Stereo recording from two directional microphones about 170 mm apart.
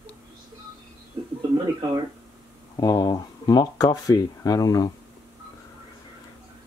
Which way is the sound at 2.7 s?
20° left (ahead or behind).